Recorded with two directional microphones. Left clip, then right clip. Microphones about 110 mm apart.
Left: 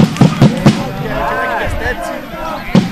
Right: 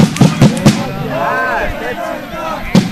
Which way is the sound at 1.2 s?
40° right (ahead or behind).